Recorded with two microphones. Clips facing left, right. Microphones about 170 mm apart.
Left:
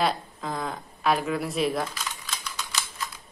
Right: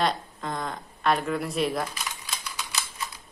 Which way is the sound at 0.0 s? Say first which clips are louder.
Even; centre (ahead or behind).